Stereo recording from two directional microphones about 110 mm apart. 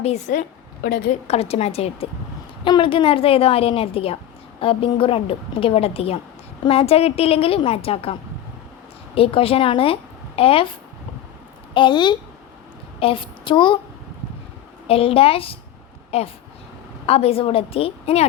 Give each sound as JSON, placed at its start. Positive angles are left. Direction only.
{"t": 0.0, "sound": "a woman's voice", "side_deg": 90}
{"t": 1.3, "sound": "a woman's voice", "side_deg": 65}
{"t": 2.6, "sound": "a woman's voice", "side_deg": 50}
{"t": 11.7, "sound": "a woman's voice", "side_deg": 45}
{"t": 13.0, "sound": "a woman's voice", "side_deg": 55}
{"t": 14.8, "sound": "a woman's voice", "side_deg": 60}
{"t": 16.1, "sound": "a woman's voice", "side_deg": 70}